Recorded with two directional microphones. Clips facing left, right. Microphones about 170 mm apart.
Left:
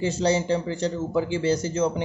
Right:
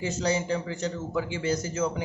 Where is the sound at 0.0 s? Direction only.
30° left (ahead or behind).